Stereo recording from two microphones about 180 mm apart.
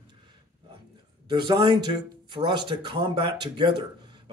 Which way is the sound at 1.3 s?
25° right (ahead or behind).